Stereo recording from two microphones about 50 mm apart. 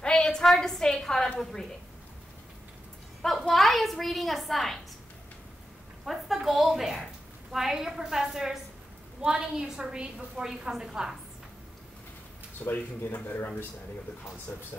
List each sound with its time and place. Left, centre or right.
0.0 s a sound: centre
1.4 s a woman's voice: centre
3.4 s a child's voice: centre
6.0 s a woman's voice: centre
12.6 s speech: left
14.5 s speech: left